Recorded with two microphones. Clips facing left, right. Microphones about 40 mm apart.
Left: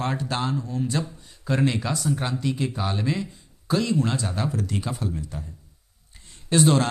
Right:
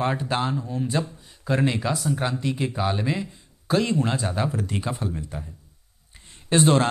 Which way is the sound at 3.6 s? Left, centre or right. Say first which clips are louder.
Right 1 dB; right.